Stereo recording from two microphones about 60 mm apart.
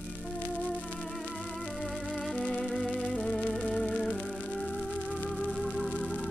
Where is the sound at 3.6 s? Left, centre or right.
Centre.